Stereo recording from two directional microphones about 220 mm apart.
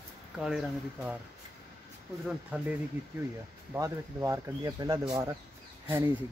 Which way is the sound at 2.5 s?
5° right (ahead or behind).